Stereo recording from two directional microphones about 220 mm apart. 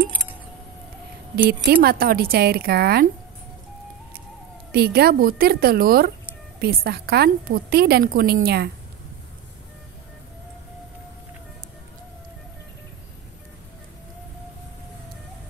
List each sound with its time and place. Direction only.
1.3 s a woman's voice: 45° right (ahead or behind)
4.7 s a woman's voice: 45° right (ahead or behind)